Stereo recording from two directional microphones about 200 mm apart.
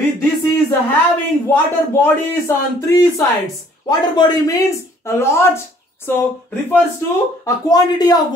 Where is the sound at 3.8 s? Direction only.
20° left (ahead or behind).